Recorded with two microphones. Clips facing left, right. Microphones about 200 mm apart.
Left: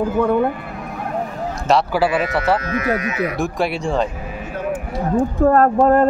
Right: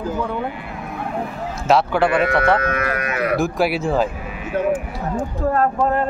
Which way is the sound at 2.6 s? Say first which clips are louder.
Left 2 dB; 60° right (ahead or behind).